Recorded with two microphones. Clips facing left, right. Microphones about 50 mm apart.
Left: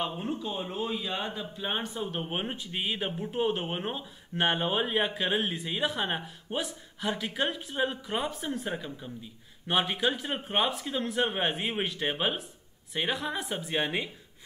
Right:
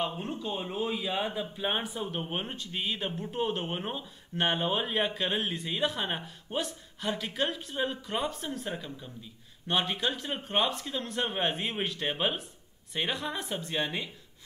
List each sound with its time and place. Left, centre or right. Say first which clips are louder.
0.0 s speech: left 1 dB; centre
2.2 s speech: left 2 dB; centre
13.7 s speech: left 3 dB; left